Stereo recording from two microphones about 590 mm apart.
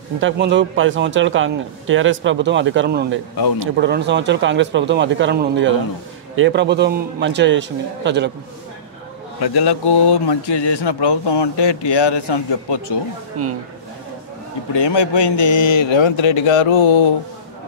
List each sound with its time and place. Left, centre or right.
0.2 s a man's voice: centre
9.4 s speech: left
14.7 s a man's voice: left